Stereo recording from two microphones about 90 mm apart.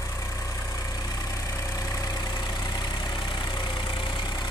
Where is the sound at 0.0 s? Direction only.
35° left (ahead or behind).